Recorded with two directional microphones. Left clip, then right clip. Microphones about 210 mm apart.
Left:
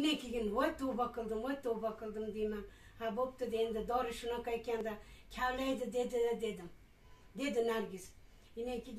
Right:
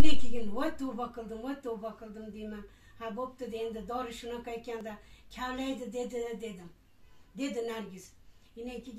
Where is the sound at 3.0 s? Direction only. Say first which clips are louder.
Left 1 dB; 15° left (ahead or behind).